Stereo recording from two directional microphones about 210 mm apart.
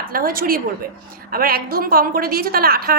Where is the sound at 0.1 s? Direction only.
45° right (ahead or behind).